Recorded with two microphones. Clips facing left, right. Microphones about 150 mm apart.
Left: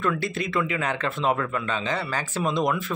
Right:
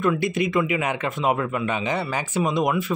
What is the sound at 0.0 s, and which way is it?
Speech, 15° right (ahead or behind).